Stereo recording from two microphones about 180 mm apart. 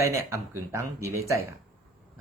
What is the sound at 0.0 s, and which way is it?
A man's voice, 15° right (ahead or behind).